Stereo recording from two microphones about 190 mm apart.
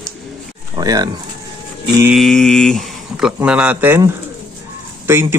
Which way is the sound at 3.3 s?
5° right (ahead or behind).